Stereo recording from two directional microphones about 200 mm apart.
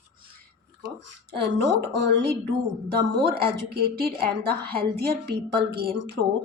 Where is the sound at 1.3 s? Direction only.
60° right (ahead or behind).